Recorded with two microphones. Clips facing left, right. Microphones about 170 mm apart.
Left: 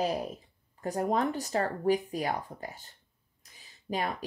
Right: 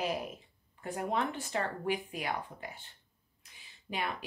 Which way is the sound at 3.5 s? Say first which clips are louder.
Left 5 dB; 40° left (ahead or behind).